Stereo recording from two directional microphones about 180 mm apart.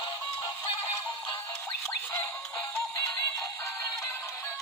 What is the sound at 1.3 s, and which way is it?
Music, 10° left (ahead or behind).